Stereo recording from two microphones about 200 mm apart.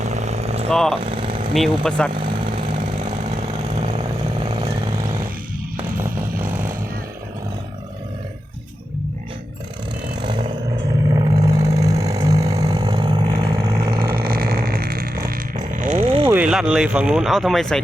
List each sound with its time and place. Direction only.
0.0 s vehicle: 35° right (ahead or behind)
0.7 s speech: centre (ahead or behind)
0.9 s vehicle: 25° right (ahead or behind)
1.5 s speech: centre (ahead or behind)
2.6 s vehicle: 40° right (ahead or behind)
3.8 s vehicle: 30° right (ahead or behind)
6.0 s chainsaw: 10° right (ahead or behind)
10.2 s vehicle: 25° right (ahead or behind)
14.0 s vehicle: 50° right (ahead or behind)
15.7 s a sound: 40° right (ahead or behind)
16.3 s speech: 5° right (ahead or behind)